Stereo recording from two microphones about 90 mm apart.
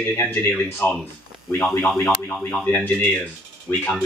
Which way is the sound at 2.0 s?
20° left (ahead or behind).